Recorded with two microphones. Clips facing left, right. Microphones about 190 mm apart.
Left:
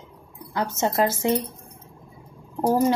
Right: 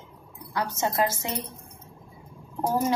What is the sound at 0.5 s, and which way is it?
Speech, 25° left (ahead or behind).